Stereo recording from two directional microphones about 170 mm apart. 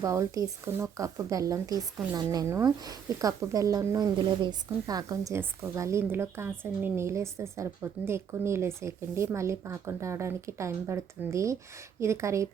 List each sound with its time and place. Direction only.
0.0 s speech: 20° right (ahead or behind)